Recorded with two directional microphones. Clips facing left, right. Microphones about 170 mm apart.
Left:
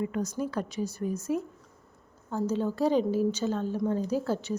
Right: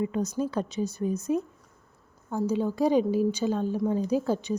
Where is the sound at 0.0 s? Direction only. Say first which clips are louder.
Right 3 dB; 20° right (ahead or behind).